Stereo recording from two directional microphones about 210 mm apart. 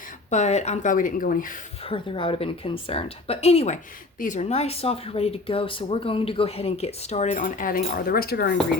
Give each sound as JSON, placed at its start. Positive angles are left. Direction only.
{"t": 0.3, "sound": "speech", "side_deg": 35}
{"t": 1.8, "sound": "speech", "side_deg": 25}